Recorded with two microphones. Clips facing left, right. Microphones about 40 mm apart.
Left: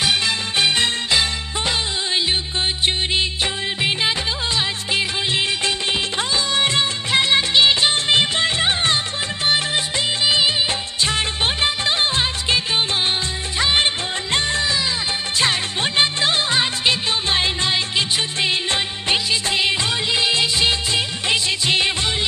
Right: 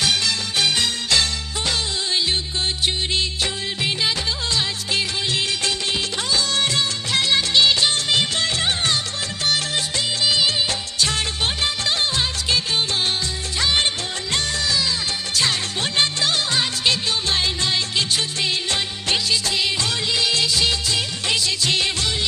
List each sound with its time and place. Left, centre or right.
0.0 s music: left
2.8 s music of bollywood: left
4.5 s music: left
10.2 s music of bollywood: left
14.3 s music: left